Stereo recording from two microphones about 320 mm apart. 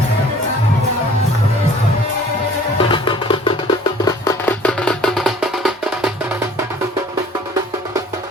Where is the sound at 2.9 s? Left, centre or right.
Centre.